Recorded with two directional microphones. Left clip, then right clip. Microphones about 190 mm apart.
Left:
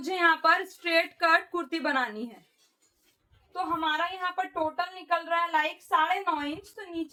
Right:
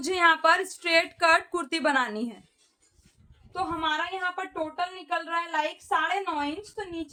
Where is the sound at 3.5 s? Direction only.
45° right (ahead or behind).